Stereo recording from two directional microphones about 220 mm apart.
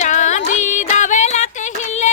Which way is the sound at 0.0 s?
35° left (ahead or behind).